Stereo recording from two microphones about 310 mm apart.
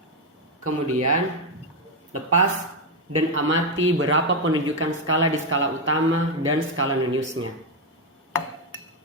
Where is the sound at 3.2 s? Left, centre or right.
Right.